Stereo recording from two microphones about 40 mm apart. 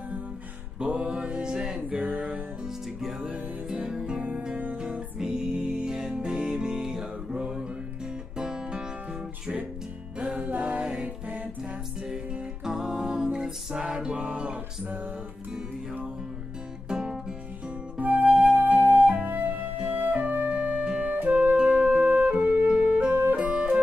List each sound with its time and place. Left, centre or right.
0.8 s mantra: right
1.9 s music: right
2.6 s music: centre
3.2 s music: right
5.2 s music: right
10.3 s music: right
12.6 s music: centre; by 14.6 s right
16.9 s music: centre
18.0 s flute: right
19.9 s music: right